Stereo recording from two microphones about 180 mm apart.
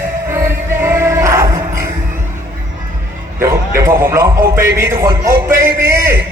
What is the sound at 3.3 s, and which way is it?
Music, 15° right (ahead or behind).